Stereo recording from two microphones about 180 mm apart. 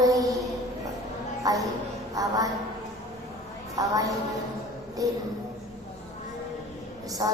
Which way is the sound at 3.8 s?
20° right (ahead or behind).